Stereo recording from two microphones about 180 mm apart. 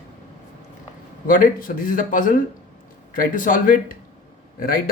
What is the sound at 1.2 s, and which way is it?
Speech, 50° left (ahead or behind).